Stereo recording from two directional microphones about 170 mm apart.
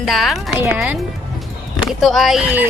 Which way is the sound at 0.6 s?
10° right (ahead or behind).